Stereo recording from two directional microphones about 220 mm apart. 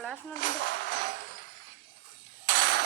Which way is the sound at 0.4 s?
55° right (ahead or behind).